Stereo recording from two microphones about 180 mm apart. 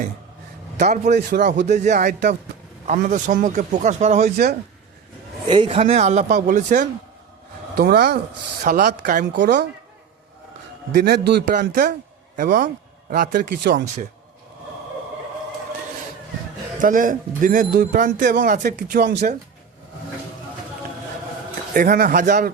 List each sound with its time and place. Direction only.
0.8 s a man's voice: 40° right (ahead or behind)
1.3 s speech: 55° right (ahead or behind)
1.7 s speech: 40° right (ahead or behind)
5.5 s a man's voice: 30° right (ahead or behind); by 6.8 s 45° right (ahead or behind)
7.8 s a man's voice: 65° right (ahead or behind)
9.3 s speech: 75° right (ahead or behind)
10.9 s a man's voice: 65° right (ahead or behind)
16.8 s speech: 50° right (ahead or behind)
21.7 s speech: 55° right (ahead or behind)